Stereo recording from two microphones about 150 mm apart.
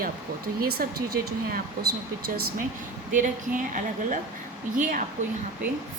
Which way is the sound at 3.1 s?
60° right (ahead or behind).